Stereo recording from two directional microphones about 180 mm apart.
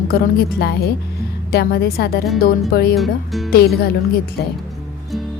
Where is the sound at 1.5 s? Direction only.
60° left (ahead or behind).